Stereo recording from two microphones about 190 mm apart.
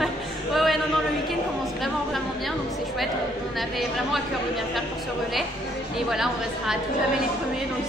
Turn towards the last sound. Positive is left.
turn(degrees=0)  # may be behind; listen again after turning